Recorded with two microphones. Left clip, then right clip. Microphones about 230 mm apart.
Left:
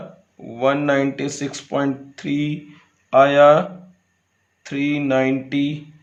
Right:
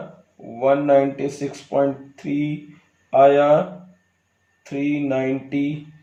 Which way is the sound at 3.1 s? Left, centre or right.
Left.